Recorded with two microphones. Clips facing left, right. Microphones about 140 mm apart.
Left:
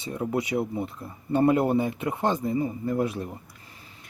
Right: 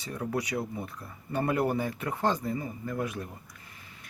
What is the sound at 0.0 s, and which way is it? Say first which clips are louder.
Speech: left 4 dB; 20° left (ahead or behind).